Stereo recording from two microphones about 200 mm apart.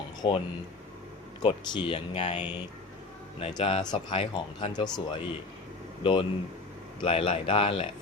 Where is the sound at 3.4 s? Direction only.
25° left (ahead or behind).